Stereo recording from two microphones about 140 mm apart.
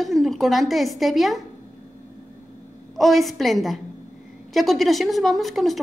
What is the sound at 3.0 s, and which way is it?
A woman's voice, centre (ahead or behind).